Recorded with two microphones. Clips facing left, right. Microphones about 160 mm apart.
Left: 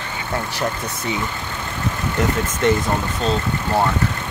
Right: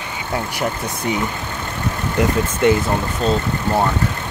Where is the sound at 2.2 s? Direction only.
15° right (ahead or behind).